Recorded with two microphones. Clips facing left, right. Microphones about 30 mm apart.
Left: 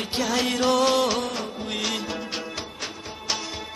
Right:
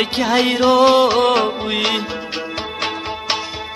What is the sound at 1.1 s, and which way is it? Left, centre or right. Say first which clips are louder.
Music: right 13 dB; right.